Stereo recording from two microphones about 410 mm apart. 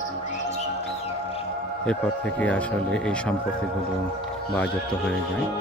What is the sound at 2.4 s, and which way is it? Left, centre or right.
Speech, centre.